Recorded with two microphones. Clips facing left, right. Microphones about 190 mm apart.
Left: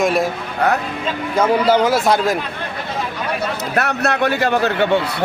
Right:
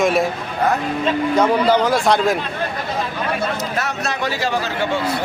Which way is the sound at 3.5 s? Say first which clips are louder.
Left 3 dB; 60° left (ahead or behind).